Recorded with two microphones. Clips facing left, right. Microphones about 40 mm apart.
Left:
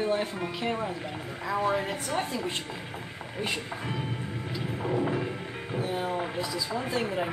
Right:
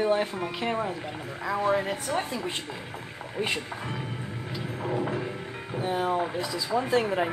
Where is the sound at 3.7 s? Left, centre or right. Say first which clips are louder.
Left 1 dB; centre.